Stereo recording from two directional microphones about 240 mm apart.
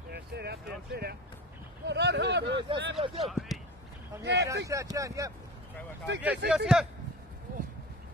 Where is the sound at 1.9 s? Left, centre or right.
Right.